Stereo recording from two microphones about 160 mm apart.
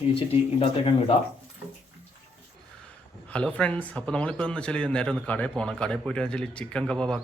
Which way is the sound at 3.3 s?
5° left (ahead or behind).